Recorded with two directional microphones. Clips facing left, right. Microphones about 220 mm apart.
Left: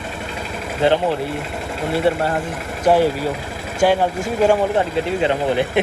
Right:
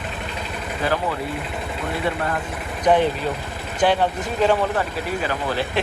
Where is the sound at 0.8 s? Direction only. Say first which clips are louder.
Left 7 dB; 25° left (ahead or behind).